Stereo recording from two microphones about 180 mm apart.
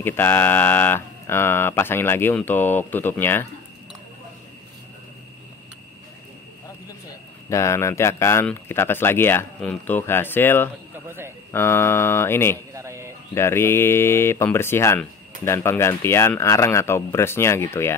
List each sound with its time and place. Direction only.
0.0 s speech: 10° left (ahead or behind)
7.4 s speech: 15° left (ahead or behind)
11.1 s a man's voice: 15° right (ahead or behind)
11.5 s speech: 15° left (ahead or behind)
12.7 s a sound: 15° right (ahead or behind)
13.3 s speech: 15° left (ahead or behind)